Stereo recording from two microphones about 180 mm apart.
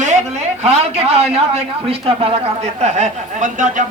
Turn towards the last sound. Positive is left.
turn(degrees=-45)  # may be behind; listen again after turning